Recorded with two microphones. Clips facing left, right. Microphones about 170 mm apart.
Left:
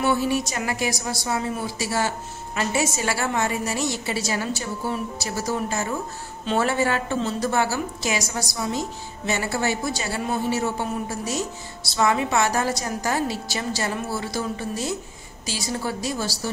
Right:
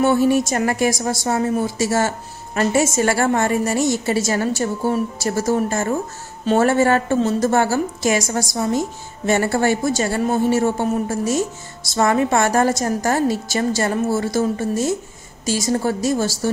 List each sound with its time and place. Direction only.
0.0 s a woman's voice: 50° right (ahead or behind)